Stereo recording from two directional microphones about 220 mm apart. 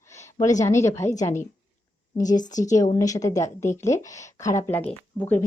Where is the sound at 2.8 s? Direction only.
15° left (ahead or behind).